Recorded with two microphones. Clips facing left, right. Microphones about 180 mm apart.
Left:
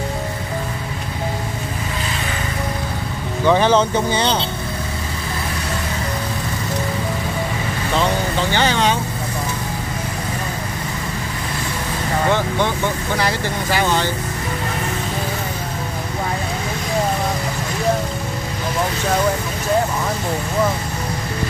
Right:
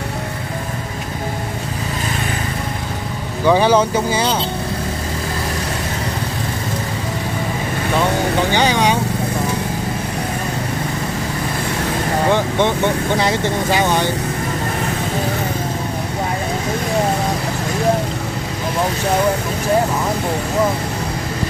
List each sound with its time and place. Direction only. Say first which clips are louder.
3.4 s speech: right 1 dB; 10° right (ahead or behind)
8.4 s vehicle: right 2 dB; 15° right (ahead or behind)
12.3 s vehicle: right 3 dB; 20° right (ahead or behind)
13.2 s speech: right 3 dB; 20° right (ahead or behind)